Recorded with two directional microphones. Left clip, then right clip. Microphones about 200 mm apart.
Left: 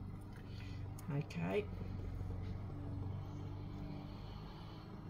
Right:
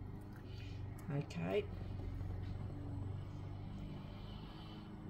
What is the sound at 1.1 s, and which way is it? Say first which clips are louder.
Speech: right 1 dB; centre (ahead or behind).